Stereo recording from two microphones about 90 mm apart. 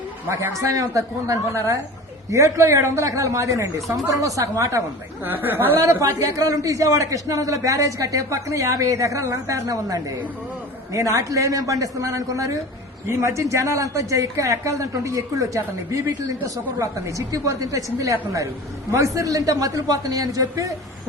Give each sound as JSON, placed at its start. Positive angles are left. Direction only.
{"t": 0.3, "sound": "a man's voice", "side_deg": -35}
{"t": 3.8, "sound": "speech", "side_deg": 0}
{"t": 4.2, "sound": "a man's voice", "side_deg": -40}
{"t": 5.2, "sound": "speech", "side_deg": -25}
{"t": 6.0, "sound": "a man's voice", "side_deg": -35}